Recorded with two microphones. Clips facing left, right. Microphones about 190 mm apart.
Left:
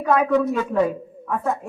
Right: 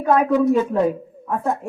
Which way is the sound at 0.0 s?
25° right (ahead or behind).